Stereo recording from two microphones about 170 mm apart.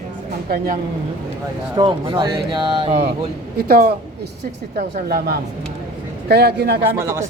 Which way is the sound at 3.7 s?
60° right (ahead or behind).